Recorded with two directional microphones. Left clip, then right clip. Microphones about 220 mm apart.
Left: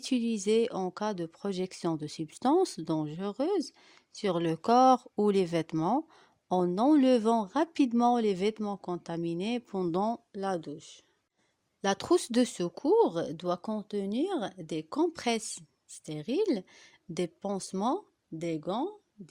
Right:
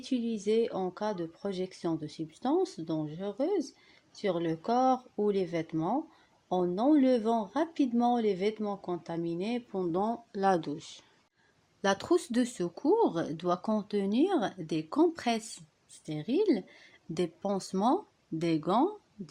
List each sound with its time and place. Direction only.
0.0 s speech: 45° left (ahead or behind)
10.3 s speech: 15° left (ahead or behind)
11.8 s speech: 35° left (ahead or behind)
17.2 s speech: 35° left (ahead or behind)